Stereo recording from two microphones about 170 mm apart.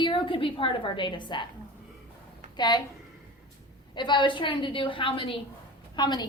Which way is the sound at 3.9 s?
25° left (ahead or behind).